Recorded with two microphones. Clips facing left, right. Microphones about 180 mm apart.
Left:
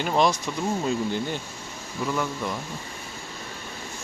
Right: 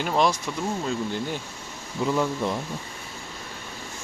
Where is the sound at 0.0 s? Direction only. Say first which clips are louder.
Left 1 dB; centre (ahead or behind).